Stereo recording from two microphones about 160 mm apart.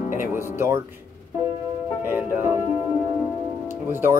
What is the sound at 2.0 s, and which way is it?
Speech, 15° right (ahead or behind).